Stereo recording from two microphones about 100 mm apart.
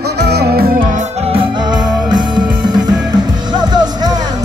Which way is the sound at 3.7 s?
45° right (ahead or behind).